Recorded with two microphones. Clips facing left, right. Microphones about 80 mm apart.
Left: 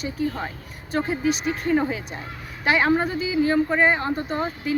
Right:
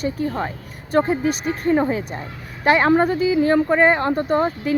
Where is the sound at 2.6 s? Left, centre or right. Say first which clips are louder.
Right 5 dB; right.